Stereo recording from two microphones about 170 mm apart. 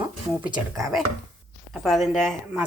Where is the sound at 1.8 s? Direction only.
Centre (ahead or behind).